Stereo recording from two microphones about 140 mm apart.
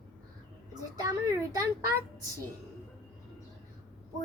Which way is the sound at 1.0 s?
25° right (ahead or behind).